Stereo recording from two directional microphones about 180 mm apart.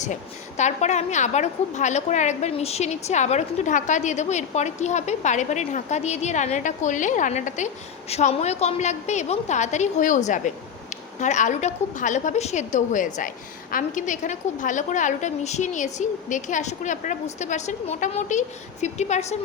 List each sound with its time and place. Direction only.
0.0 s a woman's voice: 40° left (ahead or behind)